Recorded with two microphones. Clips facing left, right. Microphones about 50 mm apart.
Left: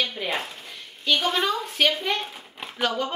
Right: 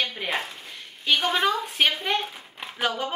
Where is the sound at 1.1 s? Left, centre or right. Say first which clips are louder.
Right 1 dB; centre.